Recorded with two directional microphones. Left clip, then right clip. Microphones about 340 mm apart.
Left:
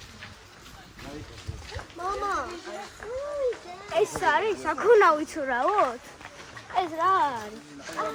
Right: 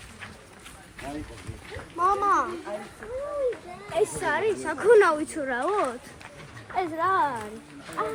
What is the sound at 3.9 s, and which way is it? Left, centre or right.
A woman's voice, left.